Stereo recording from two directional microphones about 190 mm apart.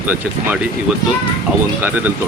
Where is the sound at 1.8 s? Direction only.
10° right (ahead or behind).